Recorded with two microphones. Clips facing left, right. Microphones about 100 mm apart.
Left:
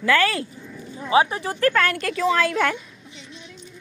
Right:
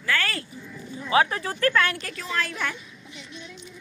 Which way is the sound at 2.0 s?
90° left.